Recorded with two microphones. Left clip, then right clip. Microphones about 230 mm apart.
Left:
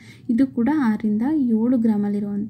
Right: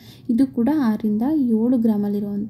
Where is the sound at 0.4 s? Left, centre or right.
Centre.